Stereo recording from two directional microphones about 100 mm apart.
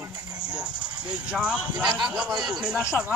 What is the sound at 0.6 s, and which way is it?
Music, 10° right (ahead or behind).